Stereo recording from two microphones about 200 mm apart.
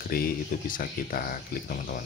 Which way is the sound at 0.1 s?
45° left (ahead or behind).